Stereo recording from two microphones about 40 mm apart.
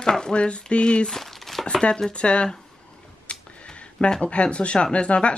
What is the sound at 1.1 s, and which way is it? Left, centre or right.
Crumpling, centre.